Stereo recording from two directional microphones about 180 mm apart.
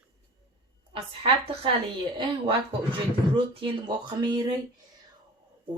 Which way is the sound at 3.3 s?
30° right (ahead or behind).